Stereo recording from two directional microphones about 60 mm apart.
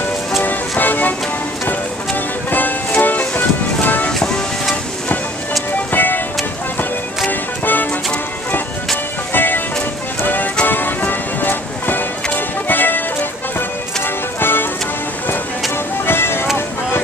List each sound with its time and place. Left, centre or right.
0.4 s music: left
2.5 s music: left
4.1 s music: centre
5.9 s music: left
7.2 s music: left
9.3 s music: left
16.1 s music: left